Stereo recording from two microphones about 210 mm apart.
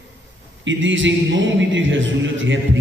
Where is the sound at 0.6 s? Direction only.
65° right (ahead or behind).